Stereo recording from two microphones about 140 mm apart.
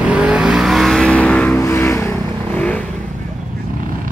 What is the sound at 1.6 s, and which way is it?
Vehicle, 20° left (ahead or behind).